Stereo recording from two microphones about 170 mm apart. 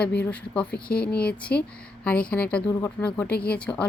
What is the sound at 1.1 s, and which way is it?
Speech, 5° left (ahead or behind).